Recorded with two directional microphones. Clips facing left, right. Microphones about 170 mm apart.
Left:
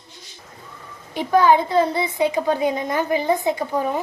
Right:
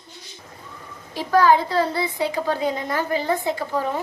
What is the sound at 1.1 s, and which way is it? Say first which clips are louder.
A woman's voice: left 1 dB; 20° left (ahead or behind).